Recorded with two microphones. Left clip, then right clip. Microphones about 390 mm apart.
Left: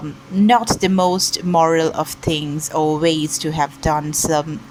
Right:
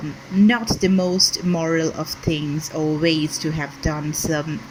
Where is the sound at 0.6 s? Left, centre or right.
Left.